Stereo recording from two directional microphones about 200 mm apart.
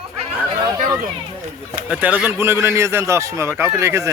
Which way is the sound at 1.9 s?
5° right (ahead or behind).